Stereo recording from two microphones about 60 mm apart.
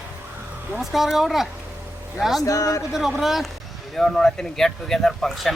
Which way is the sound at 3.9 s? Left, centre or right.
Centre.